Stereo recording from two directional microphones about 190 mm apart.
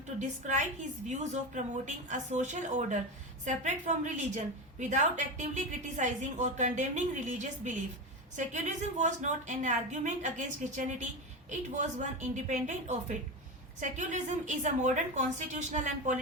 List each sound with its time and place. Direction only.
0.2 s a woman's voice: 40° right (ahead or behind)